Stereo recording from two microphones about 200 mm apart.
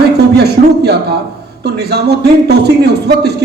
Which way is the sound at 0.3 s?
55° right (ahead or behind).